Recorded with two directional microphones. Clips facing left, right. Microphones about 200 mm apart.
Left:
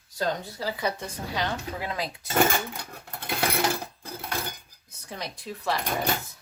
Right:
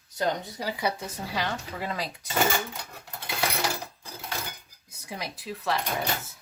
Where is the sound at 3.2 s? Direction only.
55° left (ahead or behind).